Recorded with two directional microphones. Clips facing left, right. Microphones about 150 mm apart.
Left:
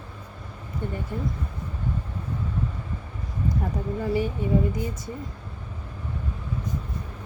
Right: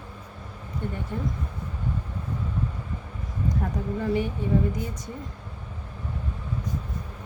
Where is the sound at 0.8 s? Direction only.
10° left (ahead or behind).